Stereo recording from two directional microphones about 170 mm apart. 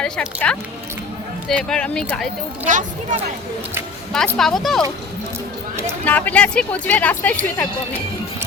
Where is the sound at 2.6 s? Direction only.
50° right (ahead or behind).